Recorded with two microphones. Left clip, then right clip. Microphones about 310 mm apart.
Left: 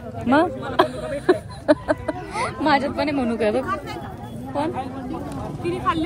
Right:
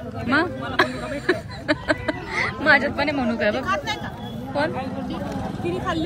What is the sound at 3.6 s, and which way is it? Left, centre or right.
Speech, right.